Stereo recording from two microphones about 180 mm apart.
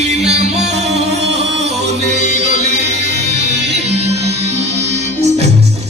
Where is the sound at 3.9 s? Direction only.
35° right (ahead or behind).